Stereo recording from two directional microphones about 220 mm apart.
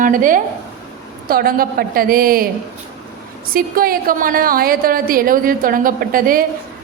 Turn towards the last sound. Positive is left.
turn(degrees=-40)  # may be behind; listen again after turning